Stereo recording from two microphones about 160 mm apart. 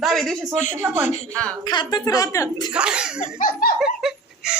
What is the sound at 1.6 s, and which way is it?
A woman's voice, 30° left (ahead or behind).